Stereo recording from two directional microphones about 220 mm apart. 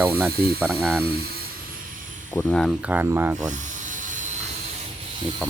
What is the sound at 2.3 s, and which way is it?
Speech, 5° left (ahead or behind).